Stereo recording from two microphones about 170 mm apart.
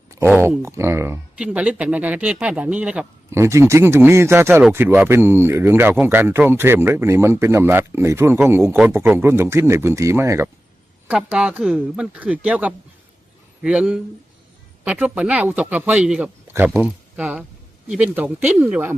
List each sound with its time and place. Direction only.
0.3 s speech: 10° right (ahead or behind)
3.4 s speech: 15° right (ahead or behind)